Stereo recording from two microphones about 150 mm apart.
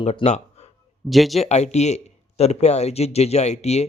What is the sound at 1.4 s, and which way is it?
Speech, 50° left (ahead or behind).